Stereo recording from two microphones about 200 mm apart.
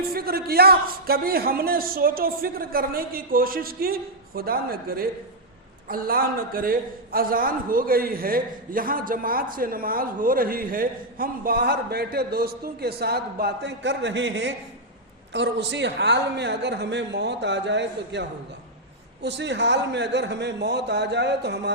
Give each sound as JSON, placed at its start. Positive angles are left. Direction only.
{"t": 0.1, "sound": "a man's voice", "side_deg": -50}